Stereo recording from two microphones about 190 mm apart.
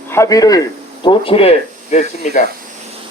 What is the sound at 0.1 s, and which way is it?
A man's voice, 15° left (ahead or behind).